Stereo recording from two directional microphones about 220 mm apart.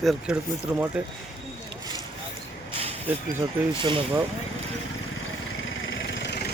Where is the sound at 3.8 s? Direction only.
20° right (ahead or behind).